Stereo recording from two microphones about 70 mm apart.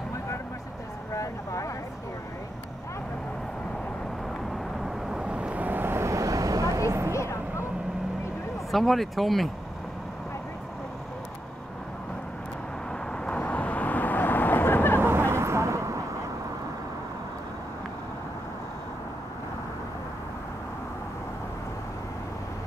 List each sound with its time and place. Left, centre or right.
1.1 s vehicle: left
4.8 s vehicle: centre; by 7.1 s right
7.1 s a sound: left
8.7 s speech: centre
13.2 s vehicle: centre
15.0 s vehicle: right